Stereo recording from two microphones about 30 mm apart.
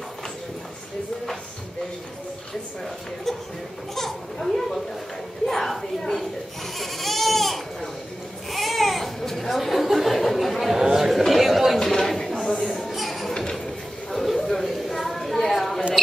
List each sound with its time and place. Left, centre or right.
3.3 s a child's voice: centre
5.5 s a sound: centre
6.8 s goat: centre
8.5 s babbling: centre
9.2 s chatter: centre
10.7 s chatter: centre
11.1 s chatter: centre
11.8 s chatter: centre
12.9 s a sound: centre